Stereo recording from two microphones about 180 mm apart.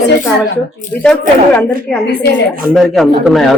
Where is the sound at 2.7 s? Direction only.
Centre (ahead or behind).